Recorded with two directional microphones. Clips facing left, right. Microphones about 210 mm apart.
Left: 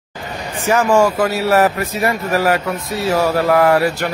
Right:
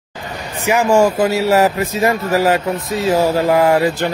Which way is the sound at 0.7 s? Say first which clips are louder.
Right 1 dB; 15° right (ahead or behind).